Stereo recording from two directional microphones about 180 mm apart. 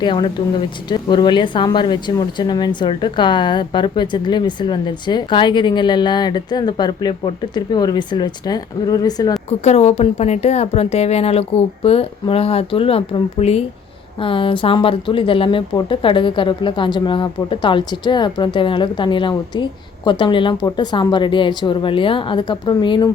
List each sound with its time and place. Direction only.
0.0 s a woman's voice: 25° left (ahead or behind)
9.5 s a woman's voice: 40° left (ahead or behind)